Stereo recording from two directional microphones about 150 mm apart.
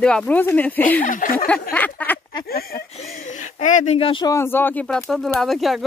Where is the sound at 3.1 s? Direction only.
55° left (ahead or behind).